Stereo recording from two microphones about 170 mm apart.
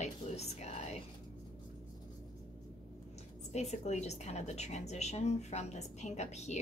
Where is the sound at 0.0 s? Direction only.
40° left (ahead or behind).